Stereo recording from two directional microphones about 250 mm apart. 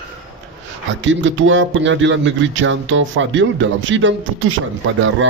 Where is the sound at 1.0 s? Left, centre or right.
Right.